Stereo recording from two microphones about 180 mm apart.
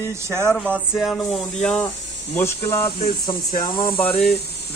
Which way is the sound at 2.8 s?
30° left (ahead or behind).